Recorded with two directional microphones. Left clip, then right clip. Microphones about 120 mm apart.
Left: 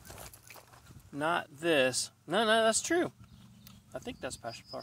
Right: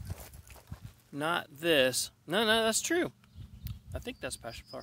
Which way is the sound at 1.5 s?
55° right (ahead or behind).